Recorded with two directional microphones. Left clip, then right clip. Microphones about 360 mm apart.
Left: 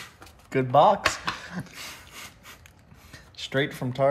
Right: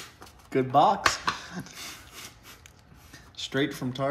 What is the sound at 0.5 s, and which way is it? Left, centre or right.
Speech, centre.